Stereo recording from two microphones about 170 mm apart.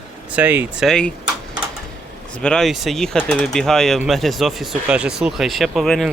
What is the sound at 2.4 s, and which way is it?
Speech, 5° left (ahead or behind).